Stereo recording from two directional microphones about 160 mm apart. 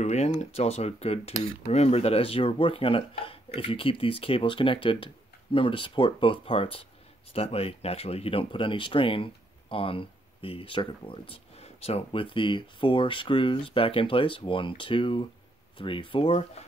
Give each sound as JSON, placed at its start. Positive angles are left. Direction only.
{"t": 0.0, "sound": "speech", "side_deg": 45}